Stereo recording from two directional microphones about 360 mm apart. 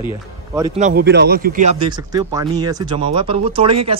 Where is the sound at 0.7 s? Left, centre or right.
Right.